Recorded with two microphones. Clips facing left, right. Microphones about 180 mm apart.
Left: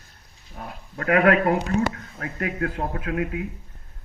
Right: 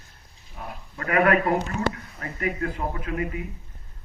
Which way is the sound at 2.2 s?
70° left (ahead or behind).